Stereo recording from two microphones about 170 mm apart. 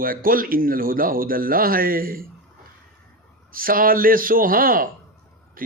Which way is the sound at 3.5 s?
55° right (ahead or behind).